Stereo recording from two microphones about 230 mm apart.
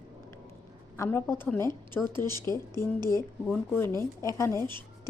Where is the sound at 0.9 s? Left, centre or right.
Centre.